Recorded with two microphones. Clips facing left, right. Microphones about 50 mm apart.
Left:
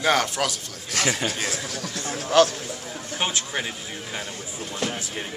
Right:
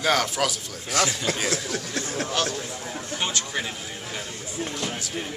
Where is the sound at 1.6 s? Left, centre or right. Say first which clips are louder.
Right 3 dB; right.